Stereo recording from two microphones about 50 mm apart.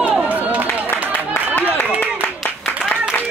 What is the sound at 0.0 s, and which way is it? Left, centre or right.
Run, right.